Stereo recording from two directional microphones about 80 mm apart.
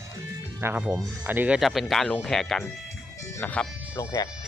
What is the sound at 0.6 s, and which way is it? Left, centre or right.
Speech, right.